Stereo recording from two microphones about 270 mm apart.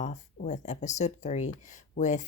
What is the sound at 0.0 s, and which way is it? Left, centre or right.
Speech, left.